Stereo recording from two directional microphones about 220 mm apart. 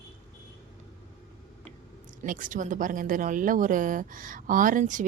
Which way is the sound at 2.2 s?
35° right (ahead or behind).